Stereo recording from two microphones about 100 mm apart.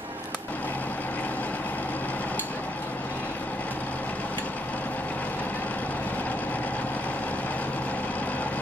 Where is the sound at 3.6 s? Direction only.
15° left (ahead or behind).